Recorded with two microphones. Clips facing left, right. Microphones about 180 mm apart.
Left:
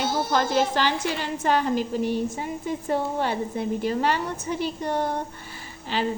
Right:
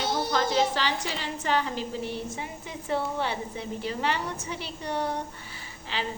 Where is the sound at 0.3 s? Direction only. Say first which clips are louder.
Left 3 dB; 50° left (ahead or behind).